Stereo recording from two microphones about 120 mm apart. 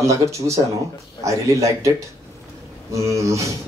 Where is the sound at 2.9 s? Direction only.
25° right (ahead or behind).